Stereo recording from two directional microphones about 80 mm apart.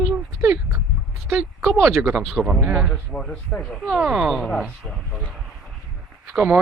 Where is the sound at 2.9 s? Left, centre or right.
Centre.